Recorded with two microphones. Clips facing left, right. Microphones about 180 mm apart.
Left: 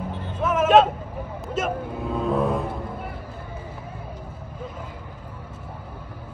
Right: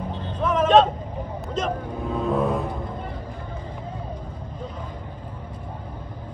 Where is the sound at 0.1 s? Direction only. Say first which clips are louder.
Right 1 dB; 10° left (ahead or behind).